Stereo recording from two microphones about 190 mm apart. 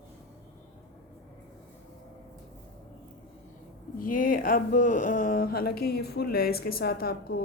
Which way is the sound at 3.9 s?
45° left (ahead or behind).